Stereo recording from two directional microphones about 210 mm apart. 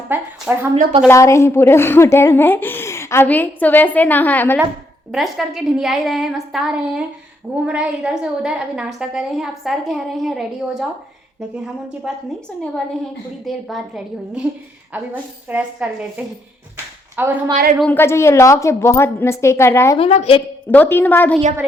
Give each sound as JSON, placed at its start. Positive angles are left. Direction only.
{"t": 0.1, "sound": "speech", "side_deg": -10}
{"t": 1.0, "sound": "a woman's voice", "side_deg": 15}
{"t": 13.4, "sound": "a woman's voice", "side_deg": 0}
{"t": 16.7, "sound": "a sound", "side_deg": -10}
{"t": 17.7, "sound": "a woman's voice", "side_deg": 10}
{"t": 20.0, "sound": "a woman's voice", "side_deg": 30}
{"t": 20.7, "sound": "a woman's voice", "side_deg": 10}